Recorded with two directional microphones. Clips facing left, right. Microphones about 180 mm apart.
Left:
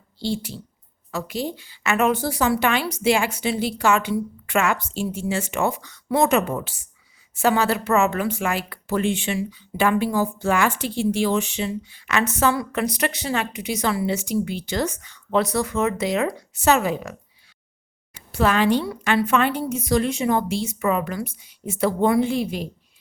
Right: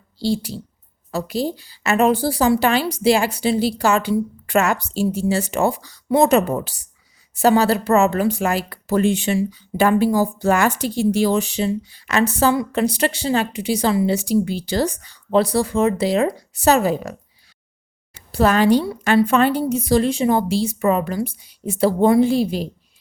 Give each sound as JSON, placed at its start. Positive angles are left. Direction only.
{"t": 0.2, "sound": "a woman's voice", "side_deg": -35}
{"t": 18.3, "sound": "a woman's voice", "side_deg": -40}